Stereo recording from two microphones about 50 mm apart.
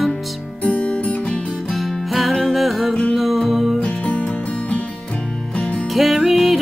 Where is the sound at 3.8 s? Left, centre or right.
Left.